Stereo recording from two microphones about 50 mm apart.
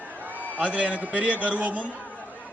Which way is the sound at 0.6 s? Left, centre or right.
Right.